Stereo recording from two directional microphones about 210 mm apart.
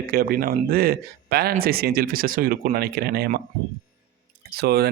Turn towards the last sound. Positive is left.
turn(degrees=-50)  # may be behind; listen again after turning